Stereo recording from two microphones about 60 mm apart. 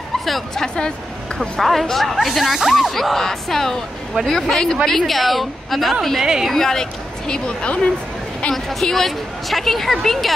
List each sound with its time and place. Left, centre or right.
0.2 s a woman's voice: centre
3.0 s a woman's voice: centre
8.5 s a woman's voice: centre